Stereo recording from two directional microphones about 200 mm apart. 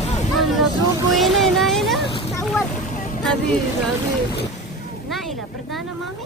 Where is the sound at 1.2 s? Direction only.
Centre (ahead or behind).